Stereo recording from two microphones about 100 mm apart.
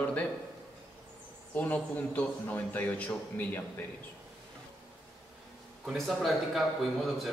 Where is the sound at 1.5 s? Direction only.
15° left (ahead or behind).